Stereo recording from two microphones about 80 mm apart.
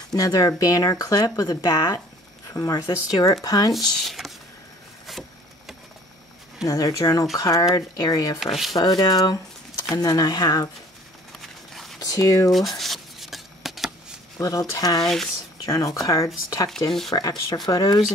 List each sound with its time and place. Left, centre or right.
0.1 s speech: left
3.7 s speech: centre
5.1 s vehicle: centre
6.6 s speech: left
8.4 s speech: centre
8.7 s speech: left
11.7 s a sound: centre
12.0 s speech: left
12.4 s a sound: centre
14.4 s speech: left